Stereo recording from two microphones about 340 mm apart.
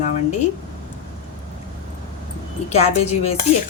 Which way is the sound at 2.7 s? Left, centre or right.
Centre.